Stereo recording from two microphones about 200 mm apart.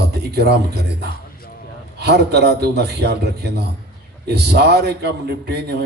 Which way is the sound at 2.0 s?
55° right (ahead or behind).